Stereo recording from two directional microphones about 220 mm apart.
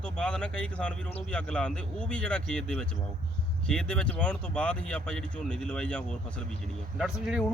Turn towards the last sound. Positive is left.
turn(degrees=-5)  # may be behind; listen again after turning